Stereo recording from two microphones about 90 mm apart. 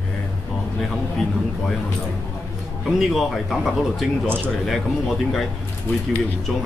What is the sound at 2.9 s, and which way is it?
Speech, centre (ahead or behind).